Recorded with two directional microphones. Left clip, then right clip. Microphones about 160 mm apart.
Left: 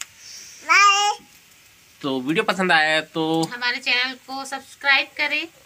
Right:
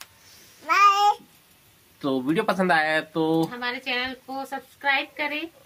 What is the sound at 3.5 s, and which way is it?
A woman's voice, 20° right (ahead or behind).